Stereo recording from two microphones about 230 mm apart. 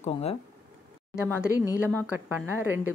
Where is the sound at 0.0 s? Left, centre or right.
Left.